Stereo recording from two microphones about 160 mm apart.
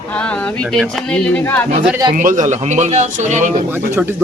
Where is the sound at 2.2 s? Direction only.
50° right (ahead or behind).